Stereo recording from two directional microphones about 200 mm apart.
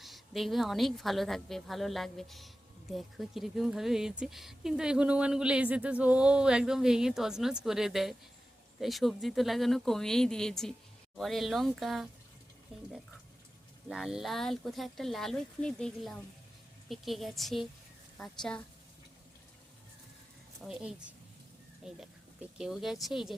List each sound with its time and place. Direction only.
0.0 s speech: centre (ahead or behind)
12.7 s speech: 30° right (ahead or behind)
13.8 s speech: centre (ahead or behind)
20.7 s speech: 5° right (ahead or behind)